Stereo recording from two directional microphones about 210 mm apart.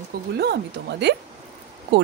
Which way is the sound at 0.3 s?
50° right (ahead or behind).